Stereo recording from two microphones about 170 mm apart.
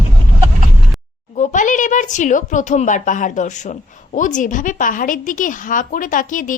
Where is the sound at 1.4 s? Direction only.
50° left (ahead or behind).